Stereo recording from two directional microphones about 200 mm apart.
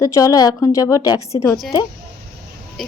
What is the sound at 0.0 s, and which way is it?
A woman's voice, 15° left (ahead or behind).